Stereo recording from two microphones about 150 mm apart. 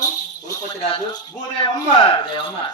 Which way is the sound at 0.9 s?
35° left (ahead or behind).